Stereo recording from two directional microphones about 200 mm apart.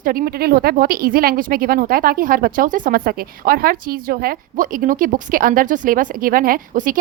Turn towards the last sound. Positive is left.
turn(degrees=-45)  # may be behind; listen again after turning